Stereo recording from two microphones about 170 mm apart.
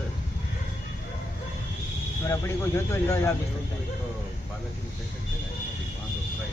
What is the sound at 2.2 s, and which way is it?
Speech, 15° left (ahead or behind).